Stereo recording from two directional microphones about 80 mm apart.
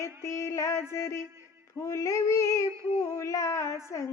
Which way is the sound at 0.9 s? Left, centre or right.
Left.